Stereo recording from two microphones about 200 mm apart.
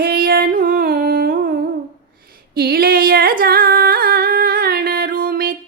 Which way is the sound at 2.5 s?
50° right (ahead or behind).